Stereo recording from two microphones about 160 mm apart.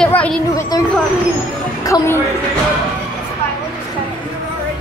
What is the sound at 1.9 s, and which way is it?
Speech, 25° left (ahead or behind).